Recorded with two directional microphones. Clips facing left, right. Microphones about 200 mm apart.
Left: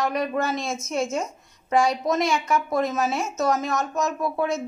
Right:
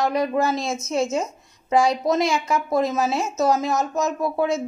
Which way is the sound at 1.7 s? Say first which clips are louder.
Right 2 dB; 30° right (ahead or behind).